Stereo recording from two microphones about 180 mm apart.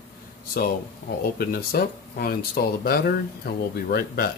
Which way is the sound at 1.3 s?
55° left (ahead or behind).